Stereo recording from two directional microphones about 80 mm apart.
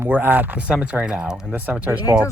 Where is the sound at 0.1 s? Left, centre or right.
Right.